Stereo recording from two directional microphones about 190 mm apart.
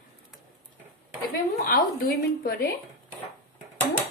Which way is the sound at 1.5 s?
55° left (ahead or behind).